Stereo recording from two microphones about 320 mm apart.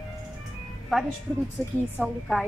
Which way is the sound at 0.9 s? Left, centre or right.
Centre.